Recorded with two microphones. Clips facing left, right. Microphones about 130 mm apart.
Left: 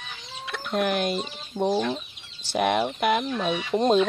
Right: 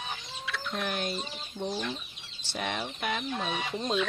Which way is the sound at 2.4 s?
80° left.